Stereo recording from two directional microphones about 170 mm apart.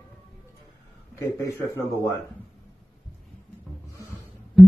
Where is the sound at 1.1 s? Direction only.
15° left (ahead or behind).